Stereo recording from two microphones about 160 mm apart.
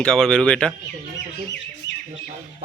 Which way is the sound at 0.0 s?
5° left (ahead or behind).